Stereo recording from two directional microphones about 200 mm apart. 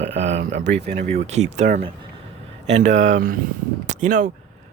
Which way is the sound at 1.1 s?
35° right (ahead or behind).